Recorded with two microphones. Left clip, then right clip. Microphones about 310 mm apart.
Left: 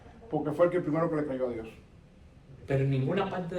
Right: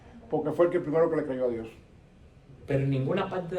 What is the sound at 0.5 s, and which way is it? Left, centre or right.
Speech, right.